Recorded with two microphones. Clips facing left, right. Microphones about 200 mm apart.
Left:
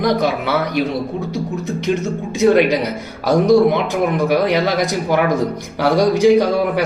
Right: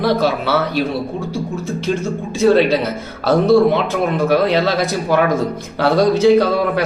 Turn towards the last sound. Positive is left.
turn(degrees=15)  # may be behind; listen again after turning